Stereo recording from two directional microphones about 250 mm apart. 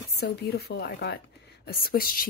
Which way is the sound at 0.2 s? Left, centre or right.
Left.